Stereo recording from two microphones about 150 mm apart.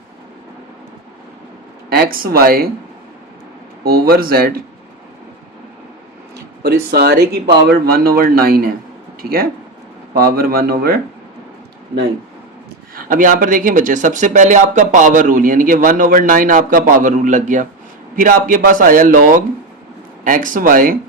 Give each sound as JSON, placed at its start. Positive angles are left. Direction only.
{"t": 1.9, "sound": "speech", "side_deg": -80}
{"t": 3.8, "sound": "speech", "side_deg": -90}
{"t": 6.3, "sound": "speech", "side_deg": -90}
{"t": 10.2, "sound": "speech", "side_deg": -90}
{"t": 13.0, "sound": "speech", "side_deg": -65}